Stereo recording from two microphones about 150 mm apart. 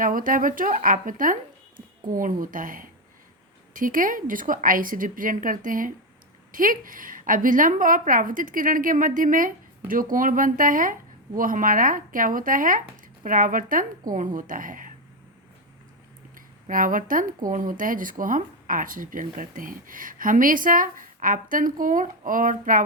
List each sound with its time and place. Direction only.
0.0 s speech: 65° right (ahead or behind)
16.6 s speech: 65° right (ahead or behind)